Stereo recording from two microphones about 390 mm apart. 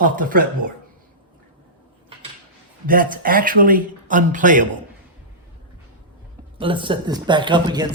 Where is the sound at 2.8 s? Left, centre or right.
Right.